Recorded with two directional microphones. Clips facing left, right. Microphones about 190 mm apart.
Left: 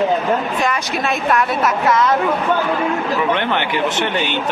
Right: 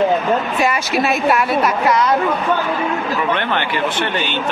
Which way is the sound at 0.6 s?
5° right (ahead or behind).